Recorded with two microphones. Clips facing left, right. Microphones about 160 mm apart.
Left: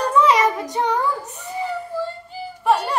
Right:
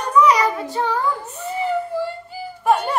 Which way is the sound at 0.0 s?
25° left (ahead or behind).